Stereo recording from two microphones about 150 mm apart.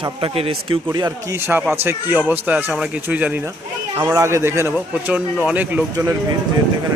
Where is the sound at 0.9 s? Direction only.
25° right (ahead or behind).